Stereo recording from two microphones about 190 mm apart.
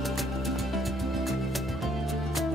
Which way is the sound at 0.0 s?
Centre (ahead or behind).